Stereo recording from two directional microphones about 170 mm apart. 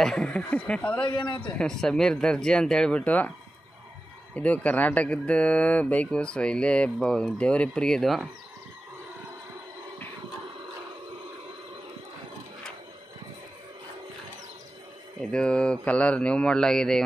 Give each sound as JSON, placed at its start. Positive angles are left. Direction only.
{"t": 0.0, "sound": "speech", "side_deg": 5}
{"t": 1.0, "sound": "a man's voice", "side_deg": 25}
{"t": 1.4, "sound": "speech", "side_deg": 5}
{"t": 4.4, "sound": "speech", "side_deg": 10}
{"t": 15.1, "sound": "speech", "side_deg": 5}